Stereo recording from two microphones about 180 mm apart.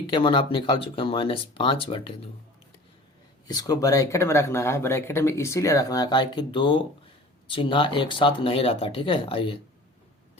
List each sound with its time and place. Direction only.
0.1 s speech: 30° left (ahead or behind)
3.4 s speech: 20° left (ahead or behind)